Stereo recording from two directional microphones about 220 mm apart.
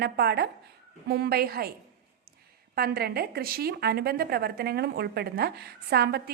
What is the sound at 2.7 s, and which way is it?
A woman's voice, 45° right (ahead or behind).